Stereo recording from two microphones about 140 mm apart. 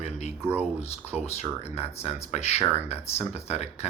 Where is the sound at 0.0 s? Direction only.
50° left (ahead or behind).